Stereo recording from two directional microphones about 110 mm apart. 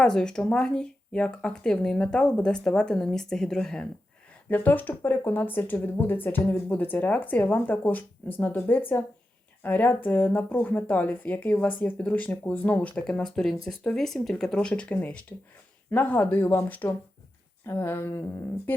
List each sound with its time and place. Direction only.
0.0 s speech: 5° left (ahead or behind)
4.4 s speech: 15° left (ahead or behind)